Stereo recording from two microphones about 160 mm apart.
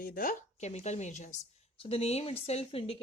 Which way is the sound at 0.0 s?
65° left (ahead or behind).